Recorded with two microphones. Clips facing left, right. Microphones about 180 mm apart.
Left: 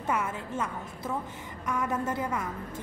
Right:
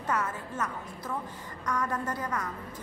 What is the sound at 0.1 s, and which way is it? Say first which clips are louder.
Speech: left 1 dB; 10° left (ahead or behind).